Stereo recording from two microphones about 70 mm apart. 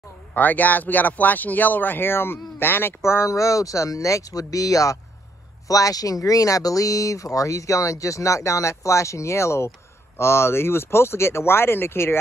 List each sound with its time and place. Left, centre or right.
0.3 s speech: left
3.0 s speech: left